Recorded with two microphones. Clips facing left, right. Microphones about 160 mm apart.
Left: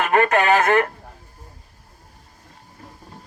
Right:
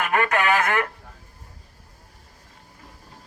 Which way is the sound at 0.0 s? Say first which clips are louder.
Left 4 dB; 30° left (ahead or behind).